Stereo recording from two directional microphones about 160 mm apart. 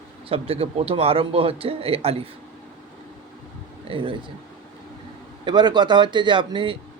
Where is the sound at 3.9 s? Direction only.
30° right (ahead or behind).